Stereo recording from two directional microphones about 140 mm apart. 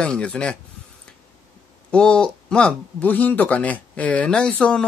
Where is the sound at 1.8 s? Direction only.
5° left (ahead or behind).